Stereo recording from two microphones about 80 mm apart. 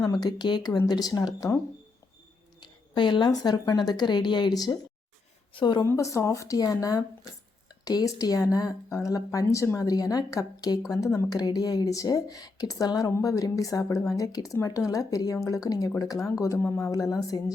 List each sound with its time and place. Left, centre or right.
0.0 s a woman's voice: left
2.6 s a woman's voice: left
5.5 s a woman's voice: left
5.9 s speech: left
11.3 s speech: left
16.6 s speech: left
16.9 s speech: left